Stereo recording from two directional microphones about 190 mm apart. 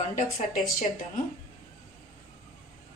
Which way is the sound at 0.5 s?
Centre (ahead or behind).